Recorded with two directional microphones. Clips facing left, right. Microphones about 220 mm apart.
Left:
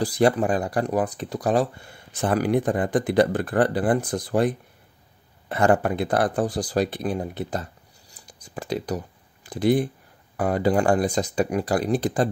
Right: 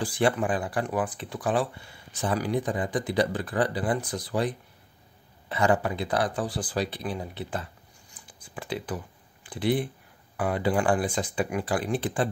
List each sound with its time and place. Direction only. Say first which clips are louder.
0.0 s speech: left 5 dB; 40° left (ahead or behind)
8.2 s a sound: left 5 dB; 45° left (ahead or behind)
10.3 s speech: left 5 dB; 40° left (ahead or behind)